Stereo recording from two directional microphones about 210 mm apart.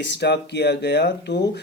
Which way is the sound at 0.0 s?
55° left (ahead or behind).